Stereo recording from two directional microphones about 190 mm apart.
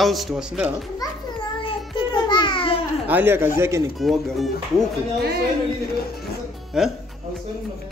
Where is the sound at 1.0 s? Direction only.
25° left (ahead or behind).